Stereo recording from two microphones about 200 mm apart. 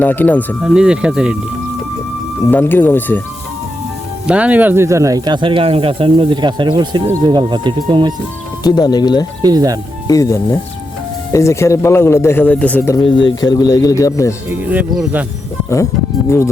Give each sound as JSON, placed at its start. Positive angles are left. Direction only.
{"t": 0.0, "sound": "speech", "side_deg": 10}
{"t": 0.6, "sound": "speech", "side_deg": -5}
{"t": 2.5, "sound": "speech", "side_deg": 10}
{"t": 4.3, "sound": "speech", "side_deg": -5}
{"t": 8.6, "sound": "speech", "side_deg": 20}
{"t": 9.4, "sound": "speech", "side_deg": -20}
{"t": 10.1, "sound": "speech", "side_deg": 15}
{"t": 13.1, "sound": "speech", "side_deg": 70}
{"t": 13.4, "sound": "speech", "side_deg": 20}
{"t": 14.5, "sound": "speech", "side_deg": -10}